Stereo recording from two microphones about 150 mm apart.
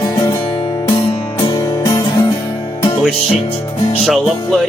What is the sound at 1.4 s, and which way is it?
Music, 25° left (ahead or behind).